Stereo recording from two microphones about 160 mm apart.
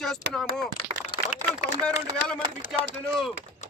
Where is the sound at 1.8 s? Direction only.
5° left (ahead or behind).